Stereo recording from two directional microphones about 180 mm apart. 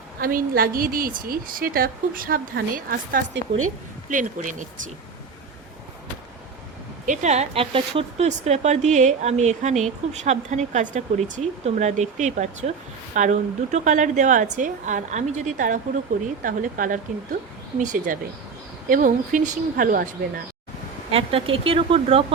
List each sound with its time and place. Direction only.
0.2 s a woman's voice: 50° right (ahead or behind)
7.0 s a woman's voice: 45° right (ahead or behind)
21.1 s speech: 30° right (ahead or behind)